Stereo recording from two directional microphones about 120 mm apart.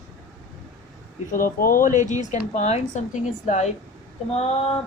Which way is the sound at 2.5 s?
75° left (ahead or behind).